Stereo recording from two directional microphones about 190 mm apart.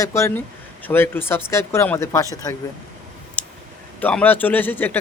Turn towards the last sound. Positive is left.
turn(degrees=10)  # may be behind; listen again after turning